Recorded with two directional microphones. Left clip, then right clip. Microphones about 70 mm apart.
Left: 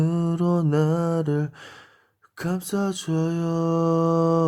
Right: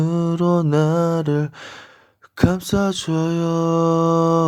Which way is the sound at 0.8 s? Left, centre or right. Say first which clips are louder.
Right 5 dB; right.